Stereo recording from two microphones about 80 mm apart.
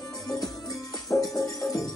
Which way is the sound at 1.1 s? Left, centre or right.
Left.